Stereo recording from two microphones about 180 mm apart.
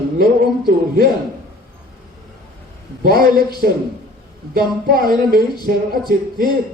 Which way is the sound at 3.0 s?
55° right (ahead or behind).